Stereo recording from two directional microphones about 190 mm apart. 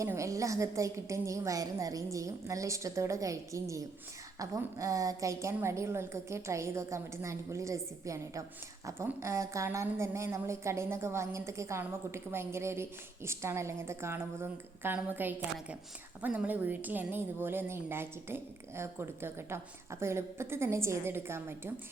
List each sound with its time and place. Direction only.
0.0 s a woman's voice: 15° right (ahead or behind)